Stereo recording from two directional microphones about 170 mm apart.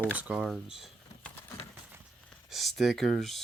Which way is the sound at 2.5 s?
Centre (ahead or behind).